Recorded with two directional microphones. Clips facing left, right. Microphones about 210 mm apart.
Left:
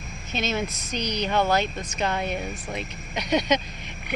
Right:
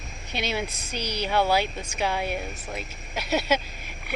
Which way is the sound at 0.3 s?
10° right (ahead or behind).